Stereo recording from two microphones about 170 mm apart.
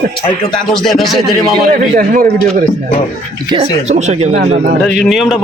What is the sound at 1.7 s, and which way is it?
Speech, 55° right (ahead or behind).